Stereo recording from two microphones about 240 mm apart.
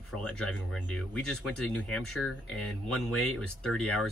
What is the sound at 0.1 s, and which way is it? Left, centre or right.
Speech, centre.